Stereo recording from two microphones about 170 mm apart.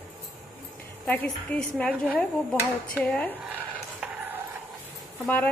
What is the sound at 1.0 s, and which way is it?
A woman's voice, 10° left (ahead or behind).